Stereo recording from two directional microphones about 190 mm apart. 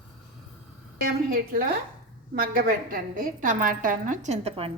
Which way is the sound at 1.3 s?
50° right (ahead or behind).